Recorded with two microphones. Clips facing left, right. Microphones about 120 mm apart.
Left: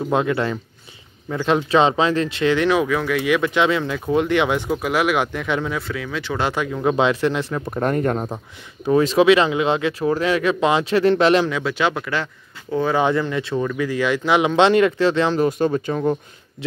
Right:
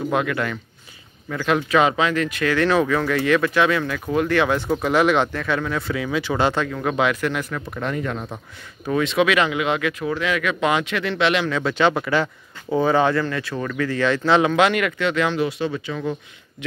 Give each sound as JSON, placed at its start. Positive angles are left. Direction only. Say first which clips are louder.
{"t": 0.1, "sound": "speech", "louder": "left 5 dB", "side_deg": 25}
{"t": 5.8, "sound": "speech", "louder": "right 3 dB", "side_deg": -5}
{"t": 6.5, "sound": "speech", "louder": "left 3 dB", "side_deg": 15}
{"t": 7.8, "sound": "speech", "louder": "left 6 dB", "side_deg": 45}
{"t": 11.4, "sound": "speech", "louder": "right 1 dB", "side_deg": 5}
{"t": 12.9, "sound": "speech", "louder": "even", "side_deg": 20}
{"t": 13.7, "sound": "speech", "louder": "right 4 dB", "side_deg": 10}
{"t": 14.5, "sound": "speech", "louder": "left 4 dB", "side_deg": 30}